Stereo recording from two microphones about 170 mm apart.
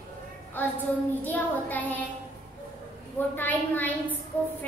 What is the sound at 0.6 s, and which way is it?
A child's voice, 10° left (ahead or behind).